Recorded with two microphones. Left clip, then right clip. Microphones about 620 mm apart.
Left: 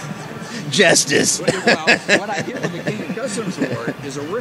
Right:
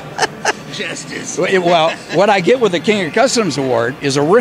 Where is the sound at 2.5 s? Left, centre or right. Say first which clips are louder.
Right 16 dB; right.